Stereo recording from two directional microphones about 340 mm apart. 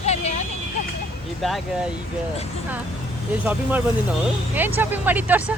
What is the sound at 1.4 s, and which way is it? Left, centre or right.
Speech, centre.